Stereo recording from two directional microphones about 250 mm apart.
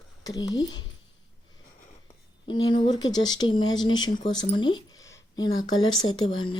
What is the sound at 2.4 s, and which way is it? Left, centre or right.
Speech, centre.